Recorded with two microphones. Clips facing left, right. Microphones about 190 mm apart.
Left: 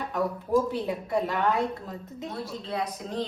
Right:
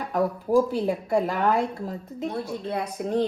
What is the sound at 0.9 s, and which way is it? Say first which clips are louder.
A woman's voice: right 4 dB; 45° right (ahead or behind).